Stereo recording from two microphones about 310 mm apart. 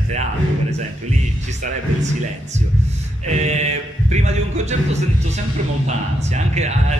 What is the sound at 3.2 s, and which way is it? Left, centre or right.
Speech, right.